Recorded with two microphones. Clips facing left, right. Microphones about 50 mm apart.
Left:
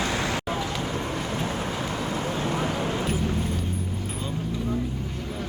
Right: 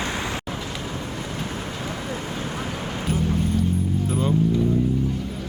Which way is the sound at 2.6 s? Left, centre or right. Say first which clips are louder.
Left 3 dB; left.